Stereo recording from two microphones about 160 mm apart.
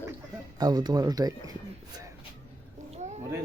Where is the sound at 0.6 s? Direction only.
25° right (ahead or behind).